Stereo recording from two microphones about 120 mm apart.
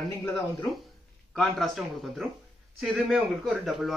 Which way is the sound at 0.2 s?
25° left (ahead or behind).